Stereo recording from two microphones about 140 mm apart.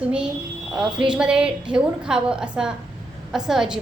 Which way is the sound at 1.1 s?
5° right (ahead or behind).